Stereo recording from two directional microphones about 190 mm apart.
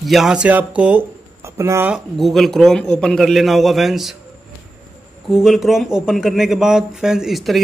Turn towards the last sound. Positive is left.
turn(degrees=0)  # may be behind; listen again after turning